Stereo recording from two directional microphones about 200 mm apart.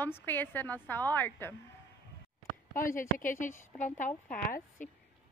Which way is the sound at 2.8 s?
45° left (ahead or behind).